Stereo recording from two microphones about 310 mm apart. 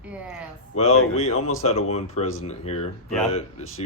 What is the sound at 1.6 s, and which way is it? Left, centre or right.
Speech, centre.